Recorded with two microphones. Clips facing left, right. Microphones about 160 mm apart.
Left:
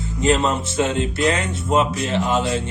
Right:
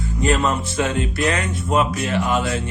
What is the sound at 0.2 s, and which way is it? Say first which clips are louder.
Speech: left 1 dB; 20° left (ahead or behind).